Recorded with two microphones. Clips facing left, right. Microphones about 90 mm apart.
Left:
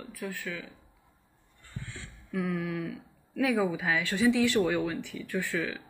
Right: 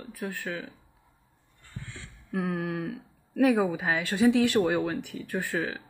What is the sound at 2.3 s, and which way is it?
Speech, 50° right (ahead or behind).